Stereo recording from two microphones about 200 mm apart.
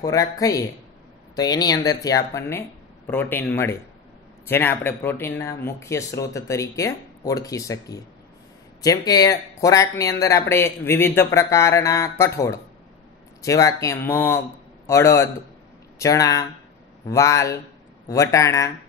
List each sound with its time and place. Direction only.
0.0 s speech: 15° left (ahead or behind)
13.4 s speech: 15° left (ahead or behind)